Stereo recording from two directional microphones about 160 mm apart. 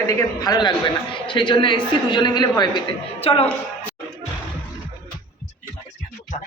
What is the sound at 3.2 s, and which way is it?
Speech, 35° left (ahead or behind).